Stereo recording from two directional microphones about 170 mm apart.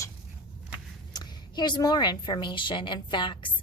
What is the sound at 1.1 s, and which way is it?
A woman's voice, 25° left (ahead or behind).